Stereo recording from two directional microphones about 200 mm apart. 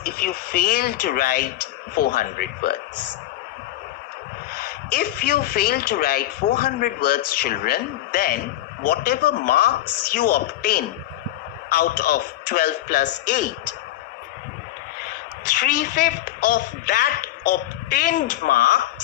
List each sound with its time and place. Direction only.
0.0 s speech: 50° left (ahead or behind)
4.9 s speech: 50° left (ahead or behind)
15.5 s speech: 45° left (ahead or behind)